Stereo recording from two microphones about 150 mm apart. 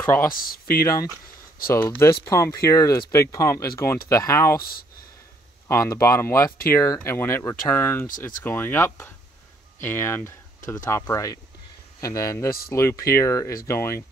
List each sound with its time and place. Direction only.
0.0 s speech: 20° left (ahead or behind)
0.3 s speech: 70° left (ahead or behind)
0.7 s speech: 25° left (ahead or behind)
5.7 s speech: 20° left (ahead or behind)